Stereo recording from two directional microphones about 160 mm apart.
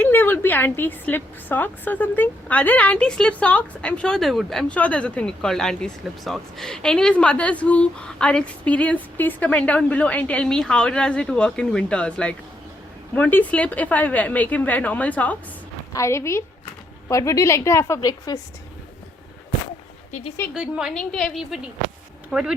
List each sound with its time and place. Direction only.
0.0 s a woman's voice: 10° left (ahead or behind)
20.5 s a woman's voice: 5° right (ahead or behind)